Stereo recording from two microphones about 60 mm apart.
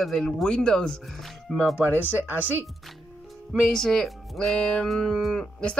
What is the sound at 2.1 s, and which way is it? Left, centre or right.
Speech, right.